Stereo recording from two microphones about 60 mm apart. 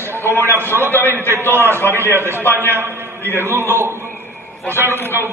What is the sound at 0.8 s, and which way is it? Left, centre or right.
Speech, left.